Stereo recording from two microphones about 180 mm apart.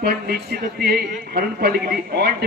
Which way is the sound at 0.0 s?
60° right (ahead or behind).